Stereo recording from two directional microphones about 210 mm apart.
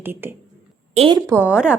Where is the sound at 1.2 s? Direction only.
15° right (ahead or behind).